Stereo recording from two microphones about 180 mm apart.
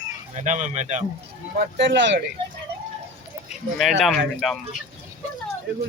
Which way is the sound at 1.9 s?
90° right.